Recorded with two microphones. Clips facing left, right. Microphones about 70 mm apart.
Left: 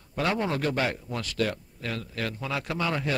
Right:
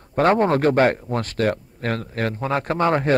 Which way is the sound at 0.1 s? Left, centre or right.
Right.